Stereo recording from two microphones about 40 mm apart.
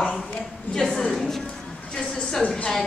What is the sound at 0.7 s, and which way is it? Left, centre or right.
Speech, centre.